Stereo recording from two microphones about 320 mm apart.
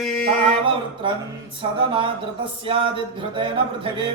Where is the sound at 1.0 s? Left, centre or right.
Centre.